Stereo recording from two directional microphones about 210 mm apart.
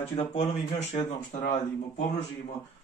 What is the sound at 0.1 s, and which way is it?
Speech, 25° left (ahead or behind).